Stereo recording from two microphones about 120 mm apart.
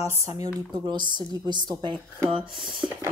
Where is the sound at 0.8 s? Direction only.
40° right (ahead or behind).